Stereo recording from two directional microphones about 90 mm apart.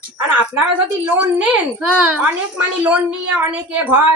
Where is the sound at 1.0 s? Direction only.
20° right (ahead or behind).